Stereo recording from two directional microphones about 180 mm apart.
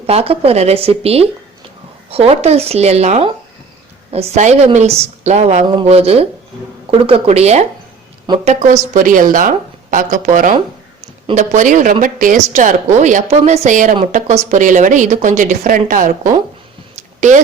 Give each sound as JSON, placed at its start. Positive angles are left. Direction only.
{"t": 0.1, "sound": "a woman's voice", "side_deg": -35}